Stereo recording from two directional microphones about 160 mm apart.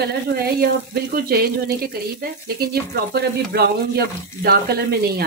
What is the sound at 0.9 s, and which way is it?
Speech, 70° right (ahead or behind).